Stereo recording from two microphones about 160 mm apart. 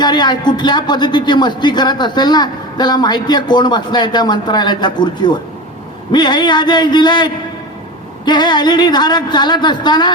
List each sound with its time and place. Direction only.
0.0 s speech: 25° left (ahead or behind)